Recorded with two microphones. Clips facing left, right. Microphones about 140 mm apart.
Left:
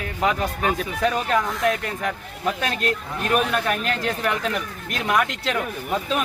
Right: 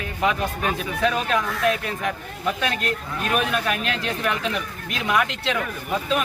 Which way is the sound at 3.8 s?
40° left (ahead or behind).